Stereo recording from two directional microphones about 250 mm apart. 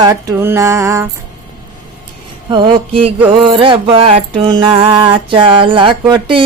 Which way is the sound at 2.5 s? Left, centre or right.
Centre.